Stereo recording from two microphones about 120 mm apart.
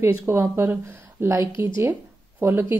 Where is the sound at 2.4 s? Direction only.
20° right (ahead or behind).